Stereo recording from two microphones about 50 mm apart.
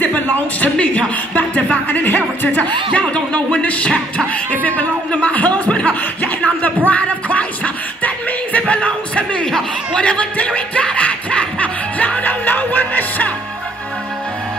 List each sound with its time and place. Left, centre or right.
0.0 s speech: left
4.5 s chuckle: left
6.2 s music: left
8.5 s a sound: left
9.5 s speech: centre
10.0 s music: left